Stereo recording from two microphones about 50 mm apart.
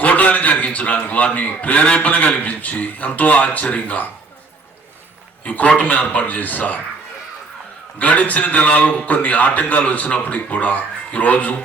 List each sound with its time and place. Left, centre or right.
0.0 s a man's voice: left
5.5 s a man's voice: left
7.9 s a man's voice: left